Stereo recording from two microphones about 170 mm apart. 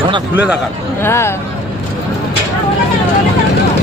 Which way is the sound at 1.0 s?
15° left (ahead or behind).